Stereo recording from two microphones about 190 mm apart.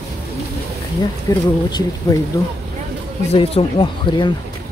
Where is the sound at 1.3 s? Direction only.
15° left (ahead or behind).